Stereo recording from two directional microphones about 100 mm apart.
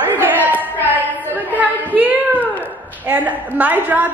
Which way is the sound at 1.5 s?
15° right (ahead or behind).